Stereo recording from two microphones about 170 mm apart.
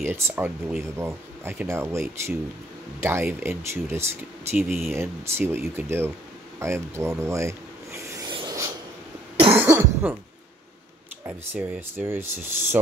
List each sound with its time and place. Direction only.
0.0 s speech: 10° right (ahead or behind)
8.3 s rub: 25° right (ahead or behind)
9.6 s cough: 10° right (ahead or behind)
11.2 s speech: 15° right (ahead or behind)